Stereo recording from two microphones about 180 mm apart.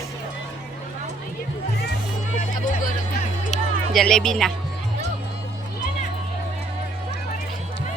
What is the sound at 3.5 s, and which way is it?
Music, centre (ahead or behind).